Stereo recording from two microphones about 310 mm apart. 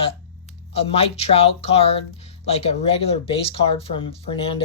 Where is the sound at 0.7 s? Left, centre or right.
Centre.